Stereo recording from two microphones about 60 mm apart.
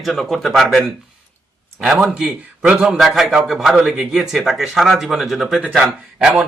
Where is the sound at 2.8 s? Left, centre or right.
Centre.